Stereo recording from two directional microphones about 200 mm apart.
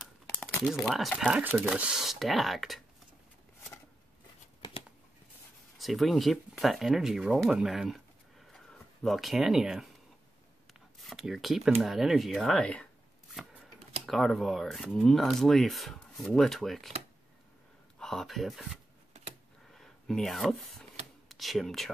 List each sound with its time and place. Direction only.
0.0 s crumpling: 5° left (ahead or behind)
0.8 s speech: centre (ahead or behind)
4.6 s a sound: 25° left (ahead or behind)
5.8 s speech: centre (ahead or behind)
10.7 s a sound: centre (ahead or behind)
11.8 s speech: centre (ahead or behind)
14.0 s speech: centre (ahead or behind)
17.9 s speech: centre (ahead or behind)